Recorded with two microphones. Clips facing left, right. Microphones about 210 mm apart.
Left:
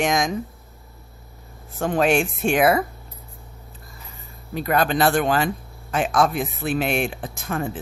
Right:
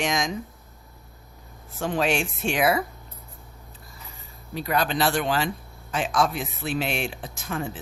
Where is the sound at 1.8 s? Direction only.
50° left (ahead or behind).